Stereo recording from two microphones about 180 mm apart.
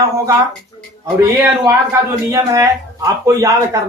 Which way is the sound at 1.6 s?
15° right (ahead or behind).